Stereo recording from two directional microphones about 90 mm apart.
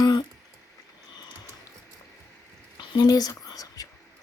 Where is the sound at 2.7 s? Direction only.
50° left (ahead or behind).